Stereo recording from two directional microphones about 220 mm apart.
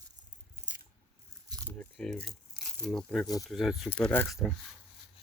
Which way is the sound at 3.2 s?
15° left (ahead or behind).